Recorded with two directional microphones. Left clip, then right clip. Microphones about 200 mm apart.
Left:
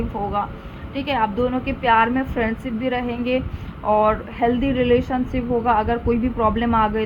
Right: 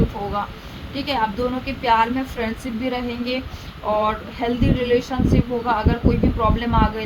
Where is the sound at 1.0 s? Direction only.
45° left (ahead or behind).